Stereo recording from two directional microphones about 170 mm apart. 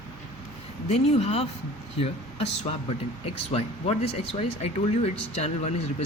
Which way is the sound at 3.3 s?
35° left (ahead or behind).